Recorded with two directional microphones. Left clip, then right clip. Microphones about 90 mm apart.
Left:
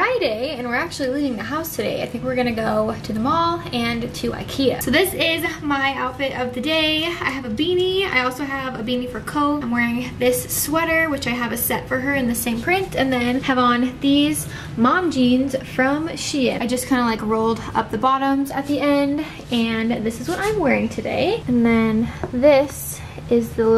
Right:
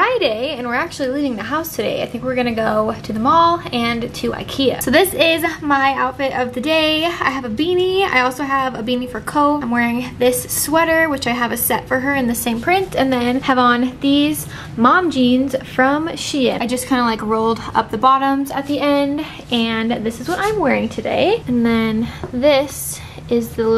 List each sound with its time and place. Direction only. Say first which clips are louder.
0.0 s a woman's voice: right 4 dB; 20° right (ahead or behind)
21.0 s a woman's voice: right 5 dB; 20° right (ahead or behind)
21.6 s a woman's voice: right 1 dB; 10° left (ahead or behind)